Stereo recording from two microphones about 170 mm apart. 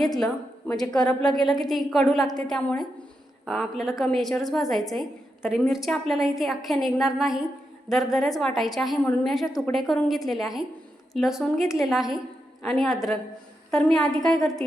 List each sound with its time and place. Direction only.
0.9 s a woman's voice: 5° left (ahead or behind)